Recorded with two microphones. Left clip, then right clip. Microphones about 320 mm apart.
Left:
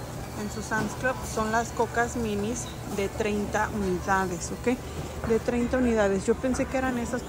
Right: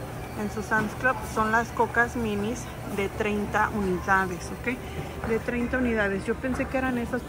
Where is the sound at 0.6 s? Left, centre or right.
Centre.